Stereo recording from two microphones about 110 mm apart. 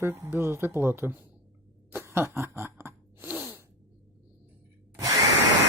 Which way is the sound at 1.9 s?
20° right (ahead or behind).